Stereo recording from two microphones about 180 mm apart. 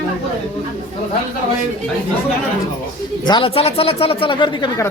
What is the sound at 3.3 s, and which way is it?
Speech, 30° left (ahead or behind).